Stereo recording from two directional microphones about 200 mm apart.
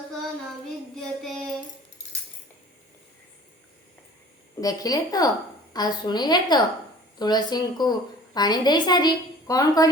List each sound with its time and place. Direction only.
1.0 s child singing: centre (ahead or behind)
4.6 s a woman's voice: 20° left (ahead or behind)